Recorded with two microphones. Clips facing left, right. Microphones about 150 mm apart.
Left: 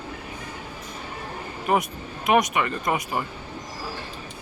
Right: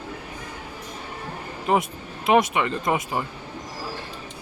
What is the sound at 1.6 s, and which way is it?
Speech, 25° right (ahead or behind).